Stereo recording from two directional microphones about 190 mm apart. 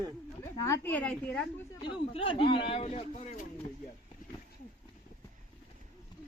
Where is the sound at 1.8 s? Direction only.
25° left (ahead or behind).